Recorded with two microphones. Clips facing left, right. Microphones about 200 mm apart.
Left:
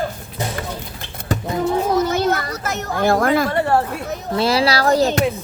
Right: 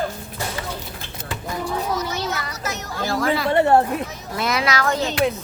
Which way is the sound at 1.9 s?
50° left (ahead or behind).